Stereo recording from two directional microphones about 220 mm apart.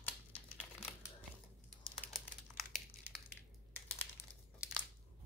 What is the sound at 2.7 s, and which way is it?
Crushing, 10° left (ahead or behind).